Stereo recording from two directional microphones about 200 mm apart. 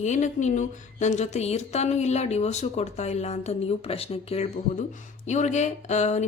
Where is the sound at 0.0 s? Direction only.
35° left (ahead or behind).